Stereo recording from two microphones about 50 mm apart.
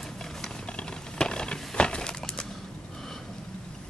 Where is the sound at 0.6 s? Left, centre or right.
Centre.